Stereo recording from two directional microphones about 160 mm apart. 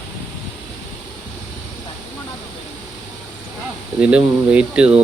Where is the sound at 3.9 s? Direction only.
5° right (ahead or behind).